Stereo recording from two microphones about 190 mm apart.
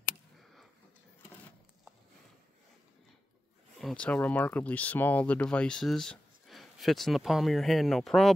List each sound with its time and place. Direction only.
3.8 s speech: 5° left (ahead or behind)